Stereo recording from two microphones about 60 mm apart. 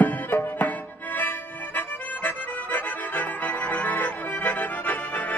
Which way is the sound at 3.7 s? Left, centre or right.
Left.